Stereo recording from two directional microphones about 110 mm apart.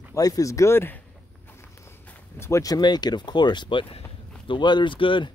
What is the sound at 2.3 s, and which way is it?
Speech, 25° left (ahead or behind).